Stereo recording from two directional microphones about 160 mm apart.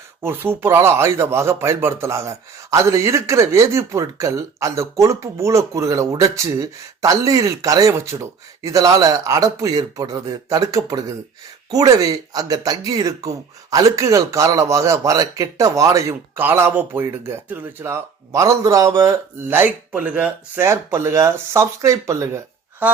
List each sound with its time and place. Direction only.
0.2 s speech: 15° right (ahead or behind)